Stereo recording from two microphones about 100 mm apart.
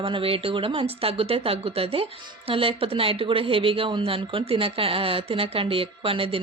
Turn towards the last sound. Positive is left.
turn(degrees=-65)  # may be behind; listen again after turning